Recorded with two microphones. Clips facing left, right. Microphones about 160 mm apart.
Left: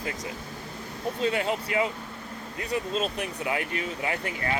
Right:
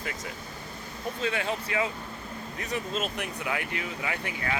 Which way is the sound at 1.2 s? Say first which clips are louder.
Left 3 dB; 30° left (ahead or behind).